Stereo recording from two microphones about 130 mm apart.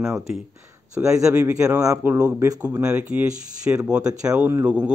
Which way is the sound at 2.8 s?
10° right (ahead or behind).